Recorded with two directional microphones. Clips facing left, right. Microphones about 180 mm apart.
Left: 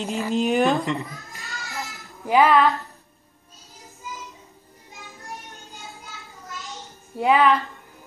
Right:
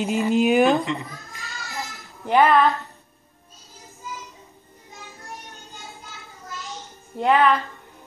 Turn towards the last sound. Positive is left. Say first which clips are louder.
# even
turn(degrees=0)  # may be behind; listen again after turning